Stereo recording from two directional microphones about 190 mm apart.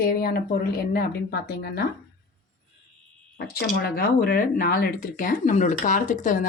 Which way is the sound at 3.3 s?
55° left (ahead or behind).